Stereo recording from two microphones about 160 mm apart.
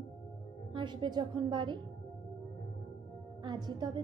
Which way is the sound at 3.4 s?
25° right (ahead or behind).